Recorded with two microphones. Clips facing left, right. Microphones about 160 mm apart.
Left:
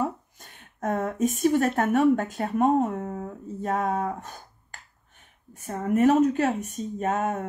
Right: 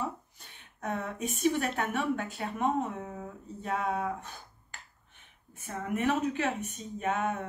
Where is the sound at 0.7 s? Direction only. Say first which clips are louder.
Left 8 dB; 45° left (ahead or behind).